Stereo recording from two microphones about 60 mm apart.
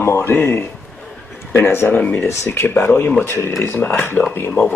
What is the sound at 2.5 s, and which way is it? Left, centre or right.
Speech, left.